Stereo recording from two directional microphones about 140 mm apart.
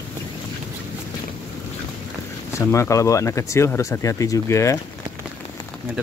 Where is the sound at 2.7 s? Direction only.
20° left (ahead or behind).